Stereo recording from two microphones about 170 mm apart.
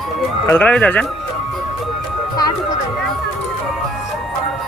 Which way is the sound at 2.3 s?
25° left (ahead or behind).